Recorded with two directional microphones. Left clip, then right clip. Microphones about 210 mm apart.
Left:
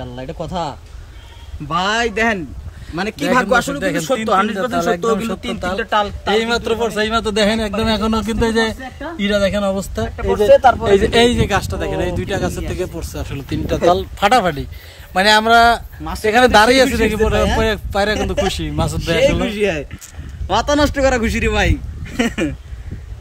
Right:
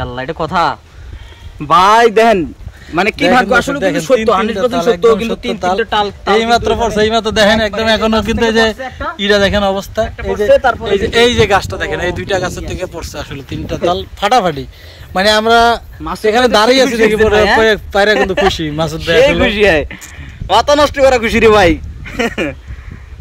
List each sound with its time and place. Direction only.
0.2 s speech: 5° right (ahead or behind)
2.0 s speech: 20° right (ahead or behind)
2.9 s a man's voice: centre (ahead or behind)
10.1 s speech: 25° left (ahead or behind)
11.1 s a man's voice: 5° left (ahead or behind)
11.3 s a man's voice: 10° right (ahead or behind)
13.5 s speech: 30° left (ahead or behind)
14.2 s a man's voice: 10° left (ahead or behind)
19.4 s a man's voice: 10° right (ahead or behind)